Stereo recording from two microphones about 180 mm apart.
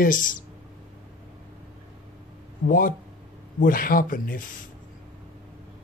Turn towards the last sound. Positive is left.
turn(degrees=50)  # may be behind; listen again after turning